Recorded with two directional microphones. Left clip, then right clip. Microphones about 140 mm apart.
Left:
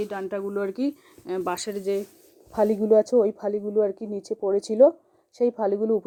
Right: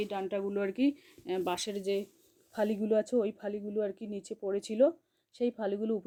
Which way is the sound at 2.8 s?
20° right (ahead or behind).